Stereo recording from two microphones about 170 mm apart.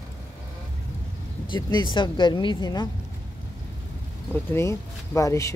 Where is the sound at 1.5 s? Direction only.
25° left (ahead or behind).